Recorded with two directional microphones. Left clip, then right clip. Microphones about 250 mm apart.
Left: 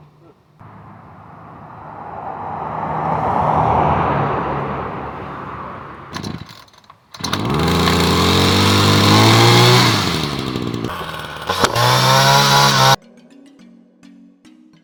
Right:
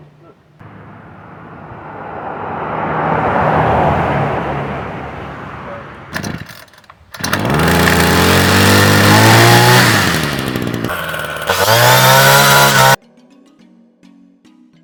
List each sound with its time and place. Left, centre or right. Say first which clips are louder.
2.6 s vehicle: right 5 dB; left
3.9 s vehicle: right 2 dB; right
6.1 s chainsaw: right 9 dB; centre
12.1 s chainsaw: right 4 dB; right